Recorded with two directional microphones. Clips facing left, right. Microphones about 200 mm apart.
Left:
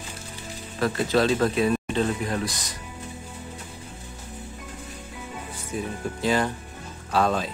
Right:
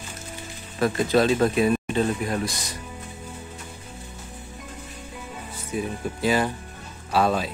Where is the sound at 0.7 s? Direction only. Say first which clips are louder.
Right 2 dB; 15° right (ahead or behind).